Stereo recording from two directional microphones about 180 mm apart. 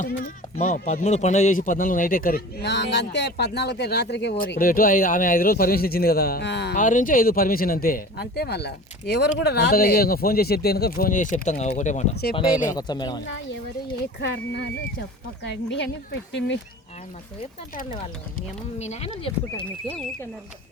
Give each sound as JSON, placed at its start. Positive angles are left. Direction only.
{"t": 0.0, "sound": "speech", "side_deg": 45}
{"t": 6.7, "sound": "speech", "side_deg": 45}
{"t": 12.7, "sound": "speech", "side_deg": 25}
{"t": 13.2, "sound": "speech", "side_deg": 90}
{"t": 14.0, "sound": "speech", "side_deg": 70}
{"t": 18.3, "sound": "speech", "side_deg": 40}